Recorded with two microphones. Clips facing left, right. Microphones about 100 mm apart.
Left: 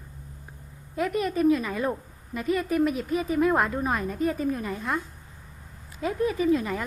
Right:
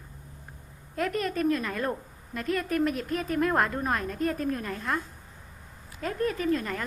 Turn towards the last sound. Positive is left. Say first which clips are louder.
# left 4 dB
turn(degrees=10)  # may be behind; listen again after turning